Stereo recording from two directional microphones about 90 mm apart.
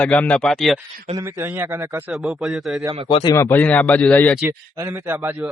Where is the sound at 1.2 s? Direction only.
25° right (ahead or behind).